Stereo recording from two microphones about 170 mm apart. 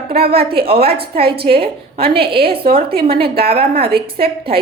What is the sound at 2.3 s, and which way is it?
Speech, 65° right (ahead or behind).